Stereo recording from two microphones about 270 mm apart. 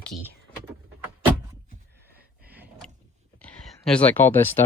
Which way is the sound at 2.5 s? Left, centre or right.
Centre.